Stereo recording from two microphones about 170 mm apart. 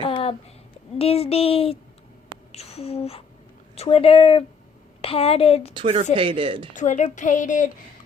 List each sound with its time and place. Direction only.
0.0 s a sound: 30° left (ahead or behind)
0.9 s speech: 35° left (ahead or behind)
2.5 s a sound: 40° left (ahead or behind)
3.8 s speech: 35° left (ahead or behind)
5.7 s speech: 30° right (ahead or behind)
6.7 s a woman's voice: 45° left (ahead or behind)